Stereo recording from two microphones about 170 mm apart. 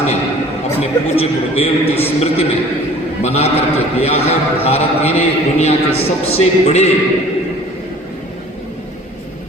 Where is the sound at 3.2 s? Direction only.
35° left (ahead or behind).